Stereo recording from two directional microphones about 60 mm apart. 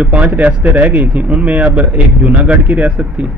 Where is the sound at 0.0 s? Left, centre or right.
Right.